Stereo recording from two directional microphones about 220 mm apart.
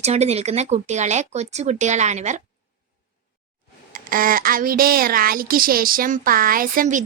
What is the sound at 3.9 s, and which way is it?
Speech, 40° right (ahead or behind).